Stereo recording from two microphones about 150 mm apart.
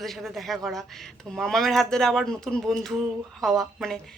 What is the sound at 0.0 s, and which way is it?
Speech, centre (ahead or behind).